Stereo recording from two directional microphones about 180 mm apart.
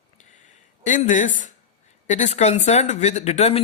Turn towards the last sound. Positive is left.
turn(degrees=35)  # may be behind; listen again after turning